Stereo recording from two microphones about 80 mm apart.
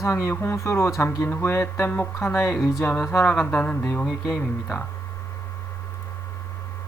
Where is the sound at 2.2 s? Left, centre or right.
Left.